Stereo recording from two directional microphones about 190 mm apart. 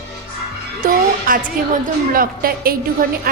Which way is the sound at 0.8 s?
45° right (ahead or behind).